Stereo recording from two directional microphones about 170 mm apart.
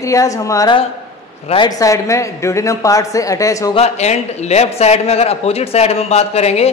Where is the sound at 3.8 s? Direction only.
40° left (ahead or behind).